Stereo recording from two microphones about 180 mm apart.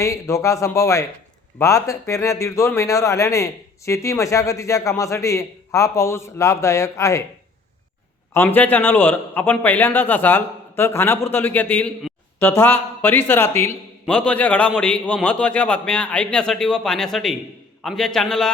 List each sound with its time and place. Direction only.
0.0 s speech: 15° left (ahead or behind)
8.3 s a man's voice: 15° left (ahead or behind)